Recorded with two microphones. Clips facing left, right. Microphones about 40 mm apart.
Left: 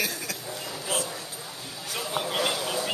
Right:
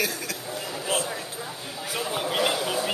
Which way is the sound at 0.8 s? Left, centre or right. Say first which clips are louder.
Right 3 dB; right.